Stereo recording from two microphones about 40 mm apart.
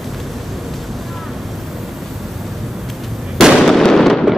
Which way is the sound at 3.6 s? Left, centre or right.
Centre.